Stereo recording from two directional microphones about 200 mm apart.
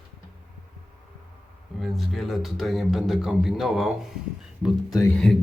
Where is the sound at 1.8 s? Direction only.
Centre (ahead or behind).